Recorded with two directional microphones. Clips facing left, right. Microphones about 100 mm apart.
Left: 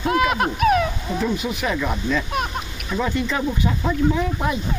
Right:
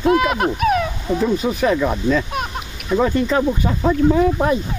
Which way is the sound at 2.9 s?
40° right (ahead or behind).